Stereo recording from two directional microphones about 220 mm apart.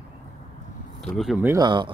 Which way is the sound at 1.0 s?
Centre (ahead or behind).